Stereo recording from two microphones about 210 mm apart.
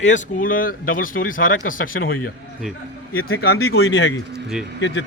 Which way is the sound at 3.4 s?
50° left (ahead or behind).